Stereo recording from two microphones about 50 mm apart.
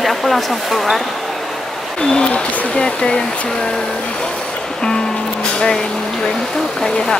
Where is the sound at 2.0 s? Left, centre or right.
Centre.